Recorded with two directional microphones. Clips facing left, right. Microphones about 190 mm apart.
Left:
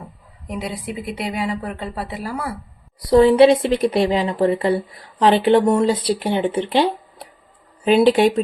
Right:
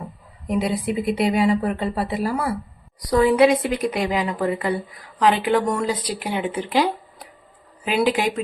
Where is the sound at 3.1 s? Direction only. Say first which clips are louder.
Left 4 dB; 25° left (ahead or behind).